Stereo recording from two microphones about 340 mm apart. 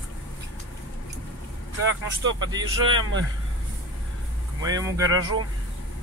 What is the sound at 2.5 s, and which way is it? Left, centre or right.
Speech, centre.